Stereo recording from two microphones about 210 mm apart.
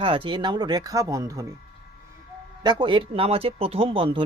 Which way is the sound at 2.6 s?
20° right (ahead or behind).